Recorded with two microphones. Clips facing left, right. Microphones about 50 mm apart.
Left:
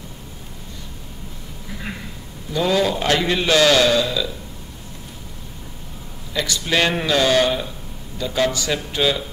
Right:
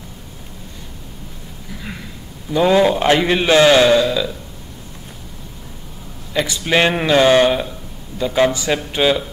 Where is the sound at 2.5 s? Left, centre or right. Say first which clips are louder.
Right 6 dB; right.